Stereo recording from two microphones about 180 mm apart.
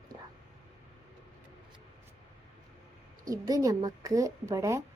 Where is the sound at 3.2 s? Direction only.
20° right (ahead or behind).